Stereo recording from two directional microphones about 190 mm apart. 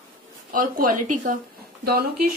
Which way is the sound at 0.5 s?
45° right (ahead or behind).